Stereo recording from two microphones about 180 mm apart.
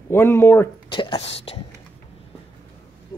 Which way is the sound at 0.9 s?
30° left (ahead or behind).